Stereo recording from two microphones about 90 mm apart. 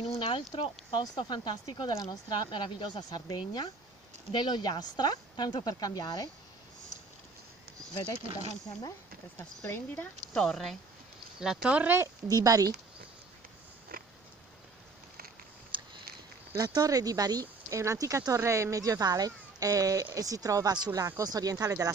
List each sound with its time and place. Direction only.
0.0 s speech: 85° left
1.0 s speech: 55° left (ahead or behind)
7.9 s speech: 50° left (ahead or behind)
10.3 s speech: 5° left (ahead or behind); by 11.9 s 10° right (ahead or behind)
12.3 s speech: 45° right (ahead or behind)
15.7 s a sound: 65° right (ahead or behind)
16.5 s speech: 45° right (ahead or behind)